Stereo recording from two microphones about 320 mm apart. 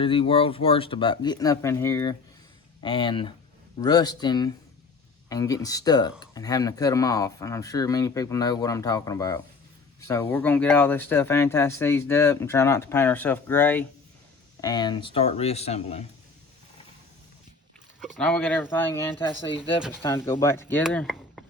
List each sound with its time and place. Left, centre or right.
0.0 s speech: centre
18.0 s speech: centre
19.1 s speech: centre
20.0 s speech: centre